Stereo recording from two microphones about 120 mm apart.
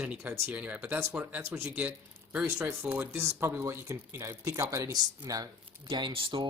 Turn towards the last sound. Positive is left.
turn(degrees=-45)  # may be behind; listen again after turning